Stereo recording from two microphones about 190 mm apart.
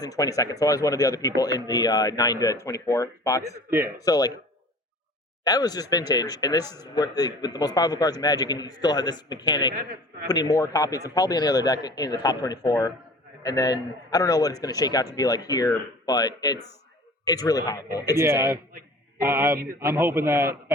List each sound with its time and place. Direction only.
0.0 s speech: 20° left (ahead or behind)
3.7 s a man's voice: 10° right (ahead or behind)
4.0 s speech: 20° left (ahead or behind)
5.5 s speech: 20° left (ahead or behind)
18.2 s a man's voice: 15° right (ahead or behind)